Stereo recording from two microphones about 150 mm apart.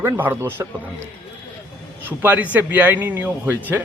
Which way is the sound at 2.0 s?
10° right (ahead or behind).